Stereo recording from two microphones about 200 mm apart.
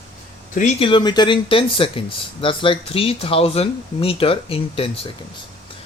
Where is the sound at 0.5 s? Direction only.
30° left (ahead or behind).